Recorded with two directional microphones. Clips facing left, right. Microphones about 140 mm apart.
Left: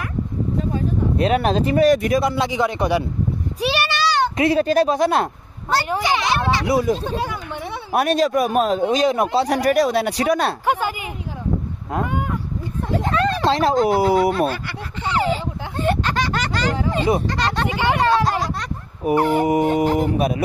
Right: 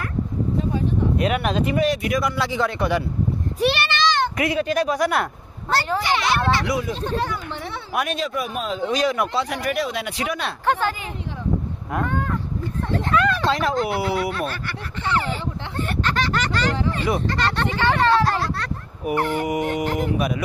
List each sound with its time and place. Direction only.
1.1 s speech: 35° left (ahead or behind)
2.1 s speech: 25° left (ahead or behind)
3.5 s a sound: 10° left (ahead or behind)
4.4 s speech: 35° left (ahead or behind); by 6.7 s 15° left (ahead or behind)
6.7 s speech: 40° left (ahead or behind)
7.0 s speech: 10° left (ahead or behind)
7.9 s speech: 40° left (ahead or behind)
8.9 s speech: 25° left (ahead or behind)
9.3 s speech: 35° left (ahead or behind)
10.6 s speech: 10° left (ahead or behind)
12.0 s a sound: 10° left (ahead or behind)
13.1 s speech: 35° left (ahead or behind)
14.3 s speech: 15° left (ahead or behind)
20.2 s speech: 30° left (ahead or behind)